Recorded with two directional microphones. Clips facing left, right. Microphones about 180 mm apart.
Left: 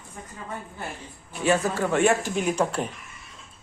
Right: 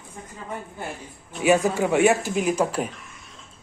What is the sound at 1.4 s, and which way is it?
Speech, 10° right (ahead or behind).